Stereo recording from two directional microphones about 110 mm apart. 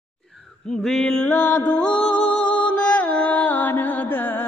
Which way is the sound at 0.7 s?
5° left (ahead or behind).